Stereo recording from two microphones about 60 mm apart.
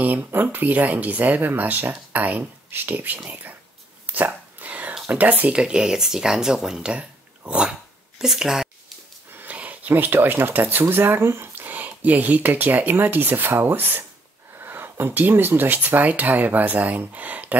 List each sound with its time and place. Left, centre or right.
0.0 s speech: right
4.0 s whispering: right
5.1 s speech: right
5.6 s speech: centre
8.2 s a sound: centre
9.3 s speech: right
11.5 s speech: right